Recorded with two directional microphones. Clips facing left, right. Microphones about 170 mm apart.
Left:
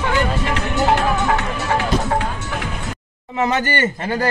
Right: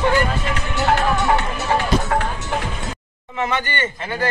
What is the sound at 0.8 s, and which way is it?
Music, 15° left (ahead or behind).